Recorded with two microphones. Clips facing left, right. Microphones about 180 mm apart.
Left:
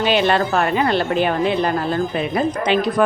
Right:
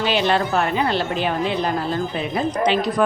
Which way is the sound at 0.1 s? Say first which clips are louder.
Left 3 dB; 55° left (ahead or behind).